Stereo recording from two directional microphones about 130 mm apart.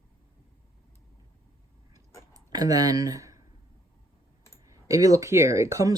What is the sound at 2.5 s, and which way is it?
Speech, 30° right (ahead or behind).